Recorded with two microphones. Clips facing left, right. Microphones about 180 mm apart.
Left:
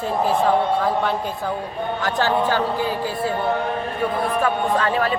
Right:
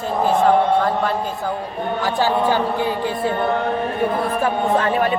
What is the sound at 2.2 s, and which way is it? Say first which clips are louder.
Speech: right 2 dB; 10° right (ahead or behind).